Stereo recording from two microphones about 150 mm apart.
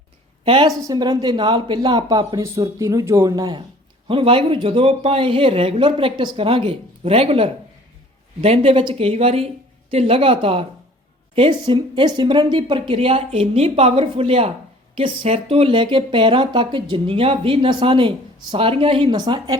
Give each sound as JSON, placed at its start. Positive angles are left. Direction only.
{"t": 0.4, "sound": "a woman's voice", "side_deg": -35}
{"t": 4.1, "sound": "speech", "side_deg": -35}